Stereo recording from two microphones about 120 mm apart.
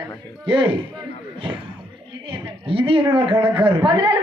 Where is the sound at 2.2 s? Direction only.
50° right (ahead or behind).